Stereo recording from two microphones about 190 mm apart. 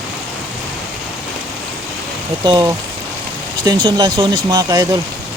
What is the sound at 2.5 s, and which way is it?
Speech, 20° right (ahead or behind).